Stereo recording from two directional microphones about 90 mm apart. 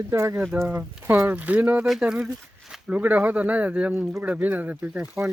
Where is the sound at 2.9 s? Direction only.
15° right (ahead or behind).